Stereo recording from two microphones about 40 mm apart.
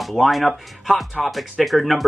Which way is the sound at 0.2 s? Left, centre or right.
Centre.